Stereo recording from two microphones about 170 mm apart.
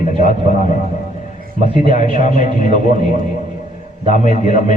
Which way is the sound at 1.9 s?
45° left (ahead or behind).